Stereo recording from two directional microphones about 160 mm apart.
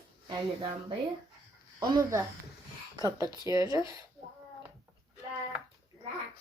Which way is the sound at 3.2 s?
25° left (ahead or behind).